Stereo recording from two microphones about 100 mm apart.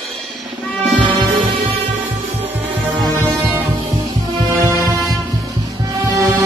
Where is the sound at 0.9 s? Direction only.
60° right (ahead or behind).